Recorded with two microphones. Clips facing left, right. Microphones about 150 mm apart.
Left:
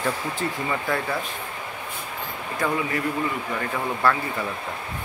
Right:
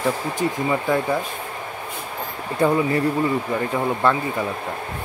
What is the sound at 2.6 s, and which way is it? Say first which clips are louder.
Speech: right 7 dB; 30° right (ahead or behind).